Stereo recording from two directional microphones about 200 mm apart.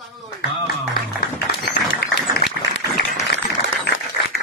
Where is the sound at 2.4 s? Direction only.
50° left (ahead or behind).